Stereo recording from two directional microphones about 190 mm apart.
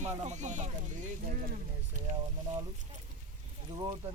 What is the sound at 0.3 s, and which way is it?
Speech, 40° right (ahead or behind).